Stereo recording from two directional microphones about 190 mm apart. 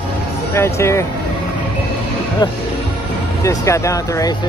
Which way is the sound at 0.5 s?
15° left (ahead or behind).